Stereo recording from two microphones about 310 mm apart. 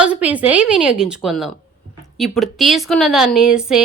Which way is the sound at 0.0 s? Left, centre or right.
Centre.